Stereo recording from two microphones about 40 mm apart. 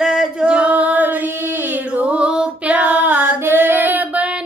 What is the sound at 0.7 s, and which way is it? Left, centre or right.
Child singing, right.